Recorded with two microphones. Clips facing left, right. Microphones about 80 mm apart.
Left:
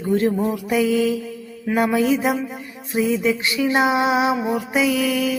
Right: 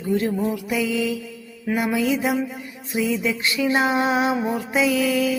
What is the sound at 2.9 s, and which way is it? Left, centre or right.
Music, left.